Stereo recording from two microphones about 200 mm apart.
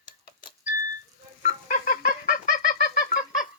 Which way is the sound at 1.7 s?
40° left (ahead or behind).